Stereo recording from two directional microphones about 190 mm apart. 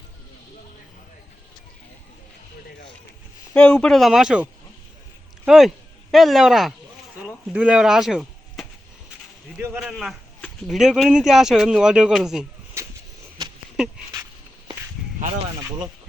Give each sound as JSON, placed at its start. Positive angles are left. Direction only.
{"t": 3.5, "sound": "a man's voice", "side_deg": 5}
{"t": 5.5, "sound": "speech", "side_deg": 0}
{"t": 9.7, "sound": "a man's voice", "side_deg": 0}
{"t": 13.4, "sound": "a sound", "side_deg": -20}